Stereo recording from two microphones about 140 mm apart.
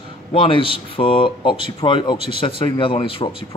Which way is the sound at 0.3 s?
40° left (ahead or behind).